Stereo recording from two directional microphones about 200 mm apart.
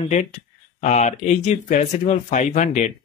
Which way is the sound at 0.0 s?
35° left (ahead or behind).